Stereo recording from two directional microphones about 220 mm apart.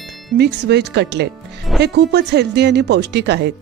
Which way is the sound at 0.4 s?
50° right (ahead or behind).